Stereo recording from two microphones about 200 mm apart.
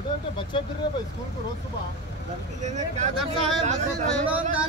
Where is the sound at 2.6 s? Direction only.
35° right (ahead or behind).